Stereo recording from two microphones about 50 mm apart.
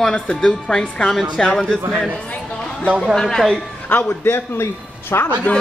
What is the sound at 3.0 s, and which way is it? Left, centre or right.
Speech, centre.